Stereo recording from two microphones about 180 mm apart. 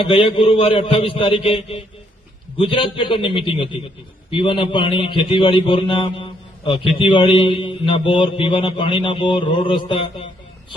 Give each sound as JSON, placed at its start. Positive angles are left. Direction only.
{"t": 0.0, "sound": "a man's voice", "side_deg": 30}